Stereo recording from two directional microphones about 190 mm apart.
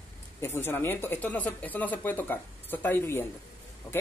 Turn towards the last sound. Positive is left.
turn(degrees=20)  # may be behind; listen again after turning